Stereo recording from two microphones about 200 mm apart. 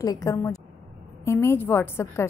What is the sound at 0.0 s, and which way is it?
A woman's voice, 15° left (ahead or behind).